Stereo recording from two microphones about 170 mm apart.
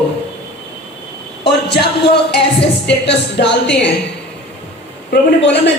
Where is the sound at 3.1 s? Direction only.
90° left.